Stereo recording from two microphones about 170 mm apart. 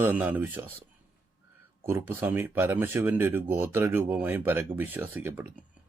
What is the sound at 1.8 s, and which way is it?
Speech, 15° right (ahead or behind).